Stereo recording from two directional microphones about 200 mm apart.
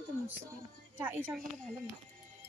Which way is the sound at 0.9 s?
10° right (ahead or behind).